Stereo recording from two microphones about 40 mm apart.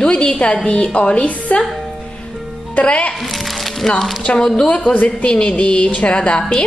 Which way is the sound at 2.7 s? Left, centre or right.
Left.